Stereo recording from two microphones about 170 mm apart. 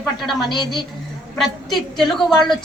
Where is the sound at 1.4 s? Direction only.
Centre (ahead or behind).